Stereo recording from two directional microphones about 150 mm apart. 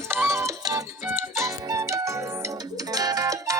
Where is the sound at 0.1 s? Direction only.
15° right (ahead or behind).